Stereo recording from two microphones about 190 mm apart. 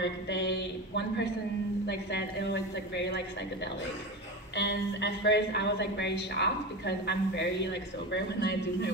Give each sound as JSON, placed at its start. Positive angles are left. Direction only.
{"t": 0.0, "sound": "a sound", "side_deg": 65}
{"t": 1.9, "sound": "a woman's voice", "side_deg": 65}
{"t": 4.6, "sound": "a woman's voice", "side_deg": 70}